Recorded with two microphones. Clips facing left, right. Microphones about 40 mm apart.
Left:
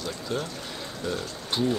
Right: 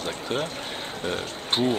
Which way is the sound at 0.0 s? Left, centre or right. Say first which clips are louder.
Right 3 dB; right.